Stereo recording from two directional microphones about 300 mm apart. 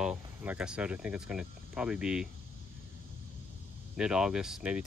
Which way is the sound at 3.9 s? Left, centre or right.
Centre.